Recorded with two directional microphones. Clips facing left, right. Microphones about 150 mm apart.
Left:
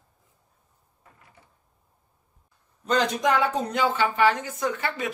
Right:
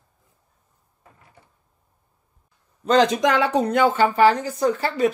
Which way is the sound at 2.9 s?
90° right.